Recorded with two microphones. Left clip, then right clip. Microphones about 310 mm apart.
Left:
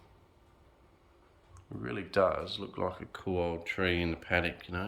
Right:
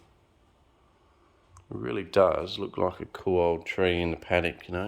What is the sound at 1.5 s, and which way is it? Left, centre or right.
Speech, right.